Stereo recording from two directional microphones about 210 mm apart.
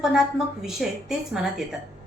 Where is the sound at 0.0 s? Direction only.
Centre (ahead or behind).